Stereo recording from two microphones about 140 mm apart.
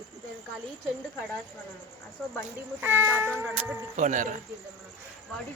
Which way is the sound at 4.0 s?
65° right (ahead or behind).